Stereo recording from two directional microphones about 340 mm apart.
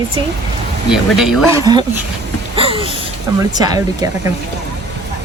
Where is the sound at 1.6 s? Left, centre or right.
Centre.